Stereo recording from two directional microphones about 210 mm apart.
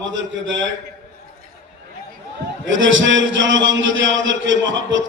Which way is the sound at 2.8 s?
65° right (ahead or behind).